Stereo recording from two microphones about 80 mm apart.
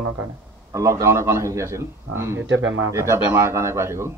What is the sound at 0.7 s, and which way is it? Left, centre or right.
A man's voice, right.